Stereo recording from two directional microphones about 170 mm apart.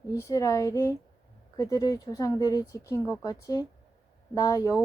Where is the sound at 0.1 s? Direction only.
20° left (ahead or behind).